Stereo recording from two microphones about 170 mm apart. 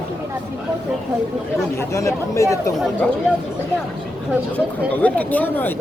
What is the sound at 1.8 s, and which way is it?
Speech, 15° left (ahead or behind).